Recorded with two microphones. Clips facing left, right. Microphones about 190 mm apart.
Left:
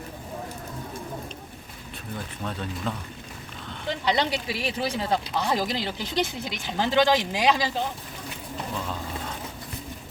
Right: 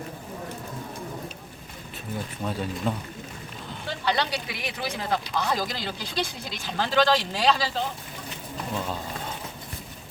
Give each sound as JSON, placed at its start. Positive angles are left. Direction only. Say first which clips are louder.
{"t": 2.4, "sound": "speech", "louder": "right 3 dB", "side_deg": -10}
{"t": 4.0, "sound": "speech", "louder": "left 1 dB", "side_deg": 20}